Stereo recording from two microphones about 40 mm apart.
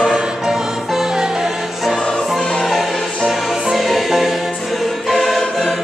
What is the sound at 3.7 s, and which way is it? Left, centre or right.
Music, centre.